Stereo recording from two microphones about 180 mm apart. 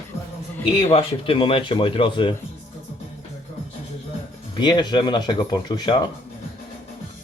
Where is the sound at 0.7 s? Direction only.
30° left (ahead or behind).